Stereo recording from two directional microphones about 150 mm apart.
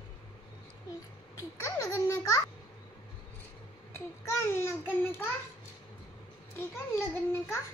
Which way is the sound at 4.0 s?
15° left (ahead or behind).